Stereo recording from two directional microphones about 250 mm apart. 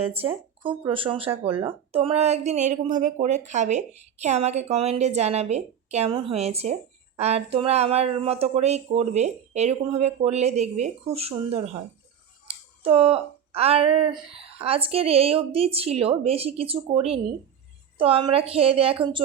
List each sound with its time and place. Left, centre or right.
0.0 s speech: right
12.5 s a sound: right
14.1 s speech: right